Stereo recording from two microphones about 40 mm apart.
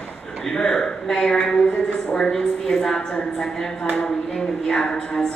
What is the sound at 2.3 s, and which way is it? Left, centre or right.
A woman's voice, centre.